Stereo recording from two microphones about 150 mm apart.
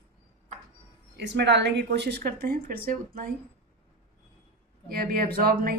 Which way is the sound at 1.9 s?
90° right.